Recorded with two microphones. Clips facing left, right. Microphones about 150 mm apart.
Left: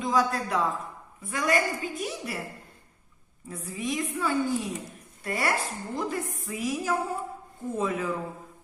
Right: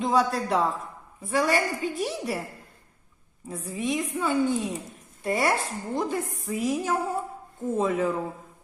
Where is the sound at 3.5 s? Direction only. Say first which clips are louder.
Right 3 dB; 25° right (ahead or behind).